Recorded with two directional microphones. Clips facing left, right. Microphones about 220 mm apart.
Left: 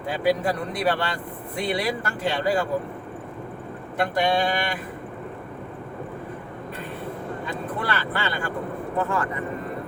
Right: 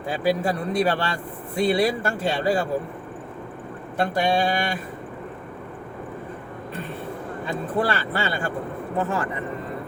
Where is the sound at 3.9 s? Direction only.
30° right (ahead or behind).